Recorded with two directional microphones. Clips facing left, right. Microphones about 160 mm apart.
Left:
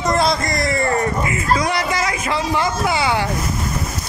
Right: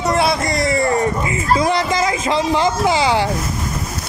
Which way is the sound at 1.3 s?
25° right (ahead or behind).